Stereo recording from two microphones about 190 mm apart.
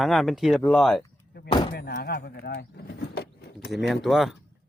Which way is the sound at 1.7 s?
55° left (ahead or behind).